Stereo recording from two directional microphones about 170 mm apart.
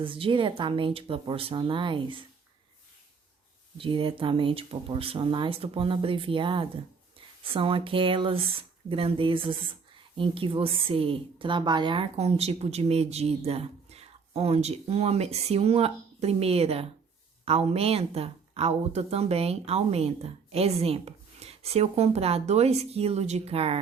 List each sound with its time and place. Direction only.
0.0 s speech: 30° right (ahead or behind)
3.8 s speech: 30° right (ahead or behind)